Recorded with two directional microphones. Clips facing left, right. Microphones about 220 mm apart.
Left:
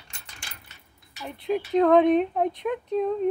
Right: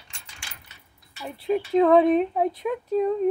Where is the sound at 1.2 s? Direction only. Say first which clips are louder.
Right 2 dB; 5° right (ahead or behind).